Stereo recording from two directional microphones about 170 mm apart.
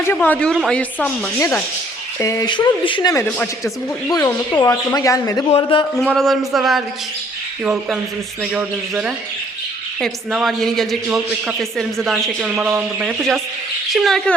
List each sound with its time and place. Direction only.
0.1 s speech: 10° left (ahead or behind)
3.2 s speech: 10° left (ahead or behind)
5.5 s speech: 35° left (ahead or behind)
6.0 s a woman's voice: 5° left (ahead or behind)